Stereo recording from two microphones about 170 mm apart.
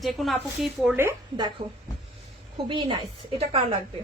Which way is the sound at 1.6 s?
60° right (ahead or behind).